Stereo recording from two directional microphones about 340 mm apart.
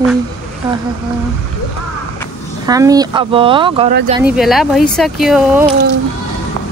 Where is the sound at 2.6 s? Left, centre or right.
Centre.